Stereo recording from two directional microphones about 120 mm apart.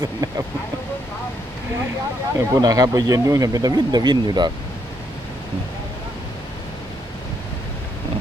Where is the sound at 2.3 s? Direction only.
30° right (ahead or behind).